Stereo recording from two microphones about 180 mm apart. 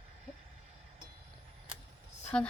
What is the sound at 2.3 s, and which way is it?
Speech, 5° left (ahead or behind).